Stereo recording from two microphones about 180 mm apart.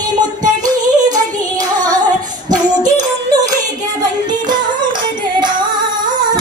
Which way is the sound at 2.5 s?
20° right (ahead or behind).